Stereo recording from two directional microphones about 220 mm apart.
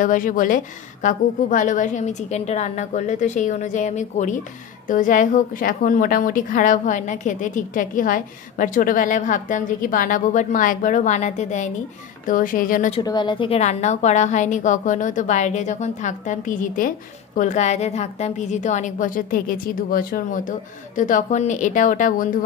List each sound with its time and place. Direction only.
0.0 s a woman's voice: 35° left (ahead or behind)
12.9 s a woman's voice: 20° left (ahead or behind); by 22.3 s 35° left (ahead or behind)